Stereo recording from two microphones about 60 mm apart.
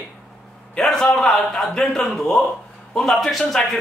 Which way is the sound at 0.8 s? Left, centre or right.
Centre.